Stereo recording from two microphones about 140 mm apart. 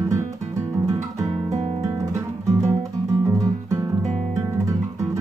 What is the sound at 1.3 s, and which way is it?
Guitar, 55° right (ahead or behind).